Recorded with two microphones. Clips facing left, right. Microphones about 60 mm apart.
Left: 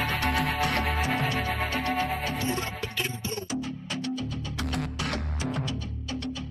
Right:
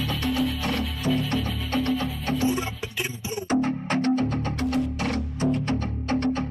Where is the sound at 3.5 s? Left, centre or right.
Right.